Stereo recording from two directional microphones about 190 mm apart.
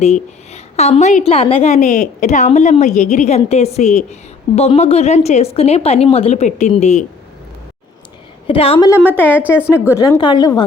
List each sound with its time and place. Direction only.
0.0 s a woman's voice: 35° left (ahead or behind)
8.4 s a woman's voice: 30° left (ahead or behind)
9.3 s a woman's voice: 10° right (ahead or behind)
9.6 s a woman's voice: 10° left (ahead or behind)